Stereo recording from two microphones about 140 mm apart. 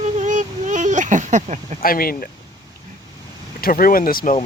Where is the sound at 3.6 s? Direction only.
90° left.